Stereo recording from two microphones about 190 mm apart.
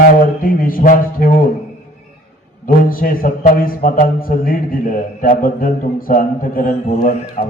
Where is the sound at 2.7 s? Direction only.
50° left (ahead or behind).